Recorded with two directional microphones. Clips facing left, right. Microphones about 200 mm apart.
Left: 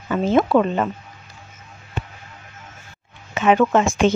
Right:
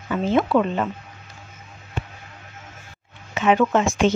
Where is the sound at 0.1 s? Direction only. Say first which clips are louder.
Left 3 dB; 45° left (ahead or behind).